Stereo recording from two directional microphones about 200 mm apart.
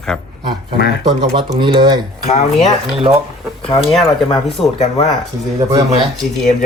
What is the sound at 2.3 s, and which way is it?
Speech, 35° left (ahead or behind).